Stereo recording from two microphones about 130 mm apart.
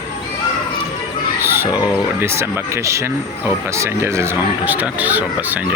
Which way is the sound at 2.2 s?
20° right (ahead or behind).